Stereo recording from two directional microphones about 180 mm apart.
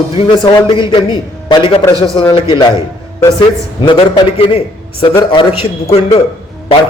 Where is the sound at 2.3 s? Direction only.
25° left (ahead or behind).